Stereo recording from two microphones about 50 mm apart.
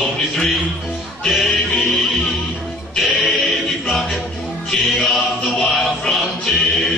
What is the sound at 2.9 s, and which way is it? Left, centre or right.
Music, centre.